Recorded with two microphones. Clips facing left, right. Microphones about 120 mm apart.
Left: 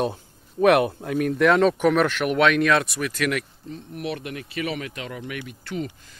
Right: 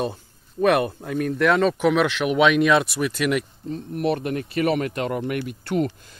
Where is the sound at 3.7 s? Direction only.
45° right (ahead or behind).